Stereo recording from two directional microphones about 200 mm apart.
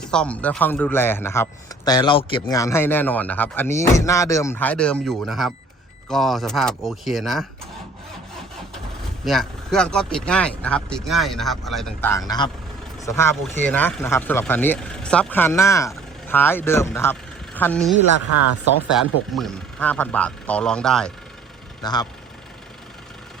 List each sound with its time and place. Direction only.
0.0 s speech: 5° left (ahead or behind)
9.2 s speech: centre (ahead or behind)
21.8 s speech: 20° left (ahead or behind)